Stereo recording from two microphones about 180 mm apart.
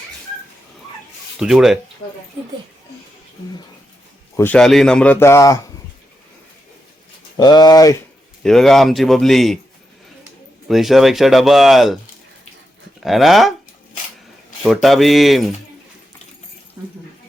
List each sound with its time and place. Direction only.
1.4 s speech: centre (ahead or behind)
4.4 s a man's voice: 10° left (ahead or behind)
7.3 s speech: 20° left (ahead or behind)
8.4 s speech: centre (ahead or behind)
10.7 s speech: centre (ahead or behind)
13.0 s speech: centre (ahead or behind)
14.6 s speech: centre (ahead or behind)